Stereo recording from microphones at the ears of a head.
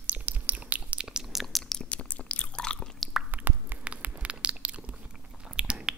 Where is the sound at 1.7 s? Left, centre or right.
Left.